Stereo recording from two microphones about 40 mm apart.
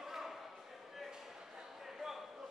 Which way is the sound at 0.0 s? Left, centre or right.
Centre.